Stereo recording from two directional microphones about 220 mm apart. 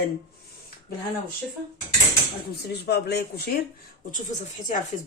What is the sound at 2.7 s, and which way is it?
Speech, 50° left (ahead or behind).